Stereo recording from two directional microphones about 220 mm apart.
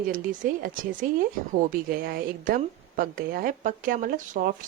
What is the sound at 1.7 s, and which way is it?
A woman's voice, 40° right (ahead or behind).